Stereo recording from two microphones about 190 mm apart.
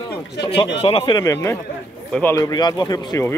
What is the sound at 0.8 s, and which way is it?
Speech, 25° left (ahead or behind).